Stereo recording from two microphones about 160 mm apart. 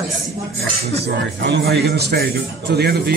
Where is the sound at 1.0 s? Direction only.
90° right.